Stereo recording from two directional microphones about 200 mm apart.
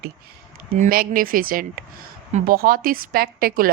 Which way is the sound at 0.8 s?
45° right (ahead or behind).